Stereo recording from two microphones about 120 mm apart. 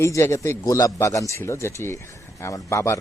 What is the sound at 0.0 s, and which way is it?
Speech, 25° left (ahead or behind).